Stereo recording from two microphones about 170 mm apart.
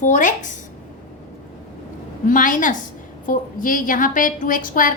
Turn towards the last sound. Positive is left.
turn(degrees=55)  # may be behind; listen again after turning